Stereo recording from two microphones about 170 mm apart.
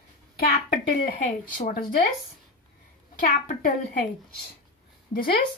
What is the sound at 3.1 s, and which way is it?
Speech, 55° left (ahead or behind).